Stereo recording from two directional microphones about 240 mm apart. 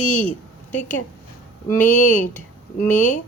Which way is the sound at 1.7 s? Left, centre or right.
Left.